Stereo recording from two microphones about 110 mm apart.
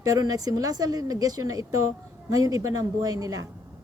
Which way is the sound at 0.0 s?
30° right (ahead or behind).